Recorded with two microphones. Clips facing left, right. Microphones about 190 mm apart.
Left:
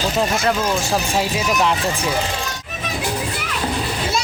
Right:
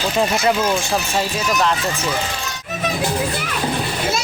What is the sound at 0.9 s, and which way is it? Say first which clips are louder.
Speech: left 1 dB; 10° left (ahead or behind).